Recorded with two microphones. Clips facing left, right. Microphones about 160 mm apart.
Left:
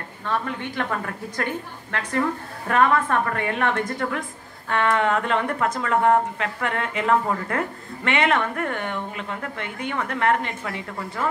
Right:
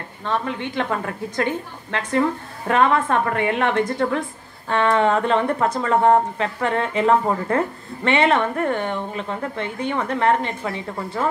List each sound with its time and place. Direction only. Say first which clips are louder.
0.2 s a woman's voice: right 3 dB; 20° right (ahead or behind)